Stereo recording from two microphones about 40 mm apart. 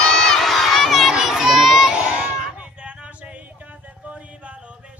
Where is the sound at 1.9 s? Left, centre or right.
Right.